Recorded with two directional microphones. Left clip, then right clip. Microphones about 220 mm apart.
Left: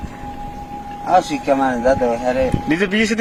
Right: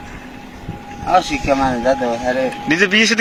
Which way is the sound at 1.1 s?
20° left (ahead or behind).